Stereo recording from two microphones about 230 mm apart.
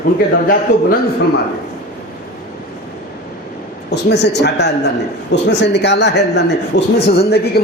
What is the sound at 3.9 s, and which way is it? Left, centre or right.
A man's voice, left.